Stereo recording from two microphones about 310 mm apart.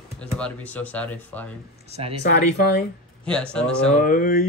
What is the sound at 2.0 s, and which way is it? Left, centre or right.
Speech, centre.